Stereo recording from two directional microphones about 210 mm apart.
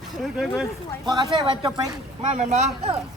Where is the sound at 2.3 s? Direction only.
35° right (ahead or behind).